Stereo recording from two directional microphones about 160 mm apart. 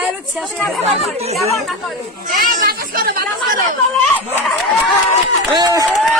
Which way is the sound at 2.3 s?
60° right (ahead or behind).